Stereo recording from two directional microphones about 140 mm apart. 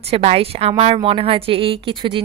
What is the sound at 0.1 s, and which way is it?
A woman's voice, 45° right (ahead or behind).